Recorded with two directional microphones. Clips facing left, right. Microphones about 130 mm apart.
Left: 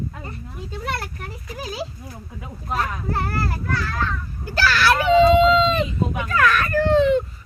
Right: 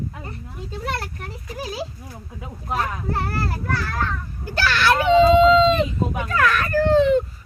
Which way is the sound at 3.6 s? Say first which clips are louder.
Even; 50° right (ahead or behind).